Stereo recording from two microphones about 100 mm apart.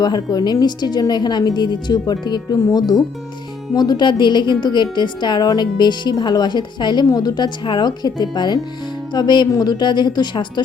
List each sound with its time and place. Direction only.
0.0 s a woman's voice: 40° left (ahead or behind)